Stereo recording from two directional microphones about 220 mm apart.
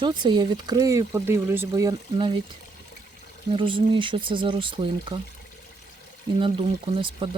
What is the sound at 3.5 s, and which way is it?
Speech, 25° right (ahead or behind).